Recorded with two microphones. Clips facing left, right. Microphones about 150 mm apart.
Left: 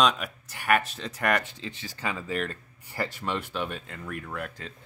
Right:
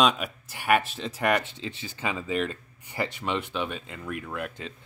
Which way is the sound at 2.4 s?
Centre (ahead or behind).